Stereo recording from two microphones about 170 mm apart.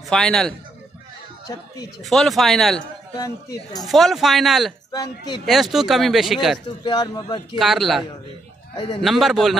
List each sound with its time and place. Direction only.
0.1 s speech: 5° left (ahead or behind)
2.0 s speech: centre (ahead or behind)
3.2 s speech: 20° left (ahead or behind)
3.8 s speech: centre (ahead or behind)
4.9 s speech: 25° left (ahead or behind)
5.4 s speech: centre (ahead or behind)
6.8 s speech: 25° left (ahead or behind)
7.5 s speech: centre (ahead or behind)
8.7 s speech: 30° left (ahead or behind)
9.0 s speech: centre (ahead or behind)